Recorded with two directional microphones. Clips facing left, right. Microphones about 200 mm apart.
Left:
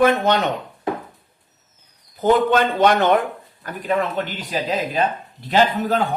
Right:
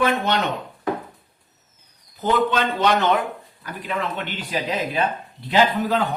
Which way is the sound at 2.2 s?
50° left (ahead or behind).